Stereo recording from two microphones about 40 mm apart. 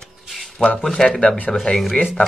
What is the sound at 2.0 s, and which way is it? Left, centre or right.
Speech, left.